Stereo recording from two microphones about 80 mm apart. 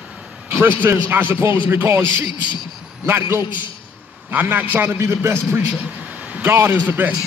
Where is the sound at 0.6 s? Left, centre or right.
Right.